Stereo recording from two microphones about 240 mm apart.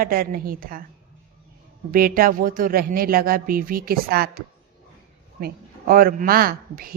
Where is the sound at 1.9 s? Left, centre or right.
Right.